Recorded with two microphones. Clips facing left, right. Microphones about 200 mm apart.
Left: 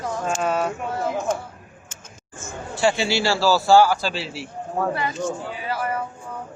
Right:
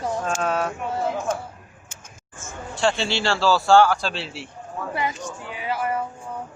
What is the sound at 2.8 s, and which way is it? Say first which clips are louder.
A man's voice: left 2 dB; 5° left (ahead or behind).